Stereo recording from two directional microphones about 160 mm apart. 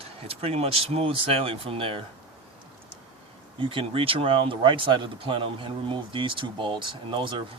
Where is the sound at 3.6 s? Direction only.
35° right (ahead or behind).